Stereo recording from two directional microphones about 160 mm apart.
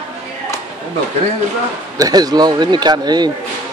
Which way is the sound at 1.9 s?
25° right (ahead or behind).